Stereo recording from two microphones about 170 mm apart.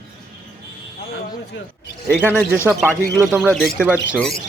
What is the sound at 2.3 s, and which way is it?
Speech, 10° right (ahead or behind).